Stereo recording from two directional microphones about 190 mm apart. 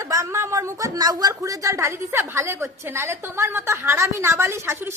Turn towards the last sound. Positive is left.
turn(degrees=-15)  # may be behind; listen again after turning